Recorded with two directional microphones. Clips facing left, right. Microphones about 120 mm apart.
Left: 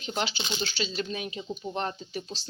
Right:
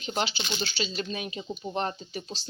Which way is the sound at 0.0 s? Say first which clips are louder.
Right 1 dB; 5° right (ahead or behind).